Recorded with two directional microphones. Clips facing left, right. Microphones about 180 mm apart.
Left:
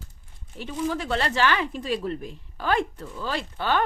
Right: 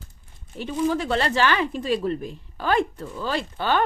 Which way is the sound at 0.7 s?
30° right (ahead or behind).